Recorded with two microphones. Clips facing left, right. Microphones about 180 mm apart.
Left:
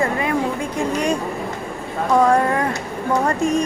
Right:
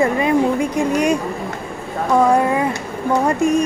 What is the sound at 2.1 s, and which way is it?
Speech, 10° right (ahead or behind).